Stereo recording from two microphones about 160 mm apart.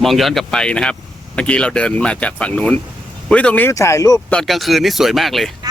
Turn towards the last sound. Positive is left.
turn(degrees=0)  # may be behind; listen again after turning